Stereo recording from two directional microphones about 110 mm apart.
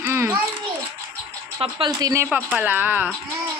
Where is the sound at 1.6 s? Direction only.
55° right (ahead or behind).